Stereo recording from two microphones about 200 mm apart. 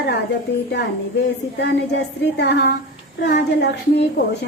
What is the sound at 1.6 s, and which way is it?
A woman's voice, 60° left (ahead or behind).